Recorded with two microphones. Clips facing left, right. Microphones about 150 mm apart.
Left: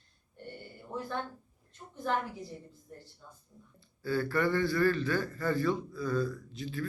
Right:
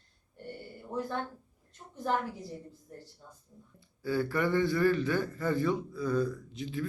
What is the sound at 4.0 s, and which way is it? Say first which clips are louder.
A man's voice: even; 15° right (ahead or behind).